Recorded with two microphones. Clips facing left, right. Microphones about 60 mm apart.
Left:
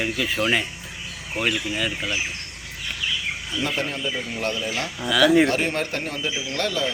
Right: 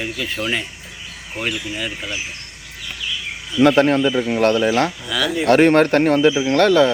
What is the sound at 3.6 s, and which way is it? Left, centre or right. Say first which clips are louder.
Speech: right 14 dB; right.